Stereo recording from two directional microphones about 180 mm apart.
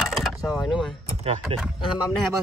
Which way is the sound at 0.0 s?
Centre (ahead or behind).